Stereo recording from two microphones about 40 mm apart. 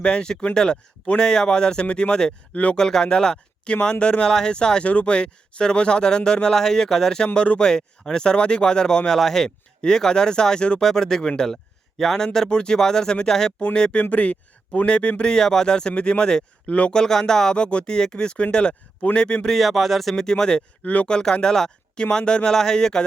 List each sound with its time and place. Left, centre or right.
0.0 s speech: left
2.5 s speech: left
2.7 s speech: centre
4.3 s speech: centre
7.3 s speech: left
7.6 s speech: centre
14.0 s speech: left
14.8 s speech: left
17.0 s speech: centre
17.5 s speech: left
19.5 s speech: centre
20.3 s speech: left
20.8 s speech: left
21.1 s speech: centre